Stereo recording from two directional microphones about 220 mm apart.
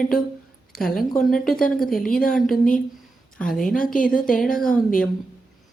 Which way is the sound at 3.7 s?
40° left (ahead or behind).